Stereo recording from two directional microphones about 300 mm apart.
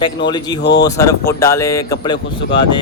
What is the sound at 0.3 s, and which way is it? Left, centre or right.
Speech, centre.